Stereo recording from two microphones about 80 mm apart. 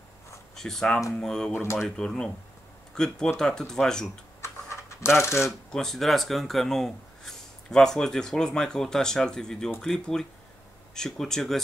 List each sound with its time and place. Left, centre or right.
0.6 s speech: centre
1.5 s speech: left
2.0 s speech: centre
4.4 s coin: left
5.7 s speech: centre